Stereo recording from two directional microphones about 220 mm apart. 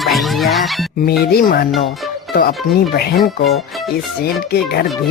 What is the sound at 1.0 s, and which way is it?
Speech, 45° left (ahead or behind).